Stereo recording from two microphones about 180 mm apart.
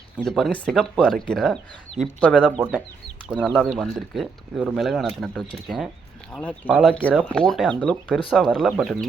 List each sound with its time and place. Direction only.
0.3 s speech: centre (ahead or behind)
2.4 s speech: 5° right (ahead or behind)